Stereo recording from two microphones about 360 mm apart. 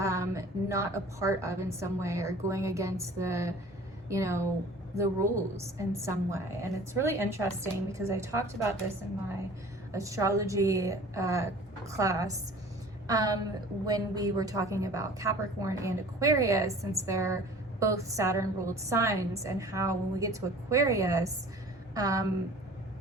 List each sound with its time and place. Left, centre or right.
0.0 s a woman's voice: centre
9.9 s a woman's voice: centre